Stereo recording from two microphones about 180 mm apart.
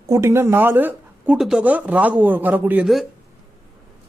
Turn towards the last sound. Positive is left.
turn(degrees=-5)  # may be behind; listen again after turning